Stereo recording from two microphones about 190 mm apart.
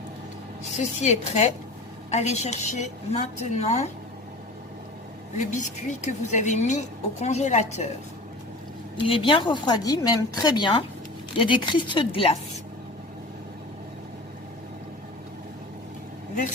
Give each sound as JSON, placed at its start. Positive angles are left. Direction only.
{"t": 0.8, "sound": "a woman's voice", "side_deg": 35}
{"t": 5.4, "sound": "a woman's voice", "side_deg": 40}
{"t": 9.0, "sound": "speech", "side_deg": 25}